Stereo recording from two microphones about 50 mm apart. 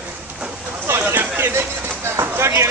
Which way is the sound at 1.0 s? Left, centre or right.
Right.